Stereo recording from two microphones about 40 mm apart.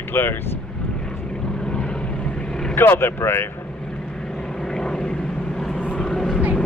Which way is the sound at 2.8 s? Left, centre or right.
Left.